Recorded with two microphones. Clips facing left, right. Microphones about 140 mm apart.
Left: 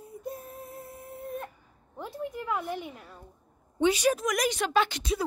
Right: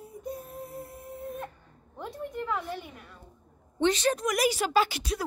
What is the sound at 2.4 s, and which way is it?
A woman's voice, 15° left (ahead or behind).